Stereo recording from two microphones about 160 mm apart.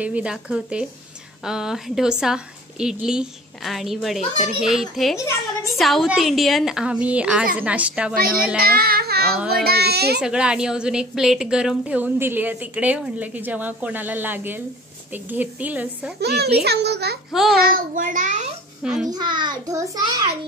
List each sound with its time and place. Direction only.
0.0 s a woman's voice: 10° right (ahead or behind)
8.1 s child singing: 65° right (ahead or behind)
9.5 s a child's voice: 70° right (ahead or behind); by 10.2 s 90° right
10.2 s a woman's voice: 5° right (ahead or behind)
16.2 s a child's voice: 90° right
17.3 s a woman's voice: centre (ahead or behind)
17.6 s a child's voice: 65° right (ahead or behind)
18.8 s a child's voice: 5° right (ahead or behind)
19.0 s a child's voice: 25° right (ahead or behind)